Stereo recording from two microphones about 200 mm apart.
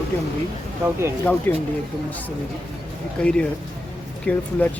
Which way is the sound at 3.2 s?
5° left (ahead or behind).